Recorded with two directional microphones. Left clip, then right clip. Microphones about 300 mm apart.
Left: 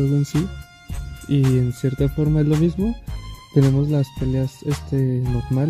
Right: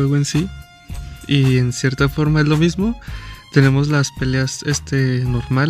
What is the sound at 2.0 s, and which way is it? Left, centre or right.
Speech, right.